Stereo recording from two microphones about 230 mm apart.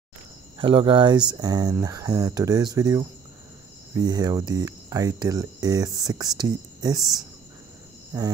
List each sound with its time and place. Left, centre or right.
0.6 s speech: right
8.1 s speech: centre